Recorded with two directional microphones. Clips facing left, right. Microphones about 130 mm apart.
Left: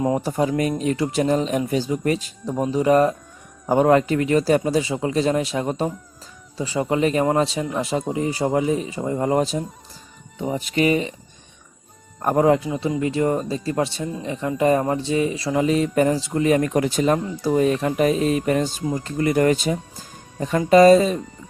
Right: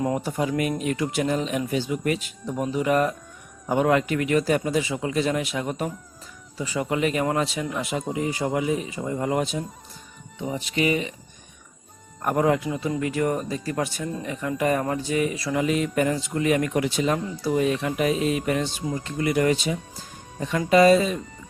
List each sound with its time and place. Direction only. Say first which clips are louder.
0.2 s speech: left 4 dB; 35° left (ahead or behind)
12.2 s speech: left 4 dB; 30° left (ahead or behind)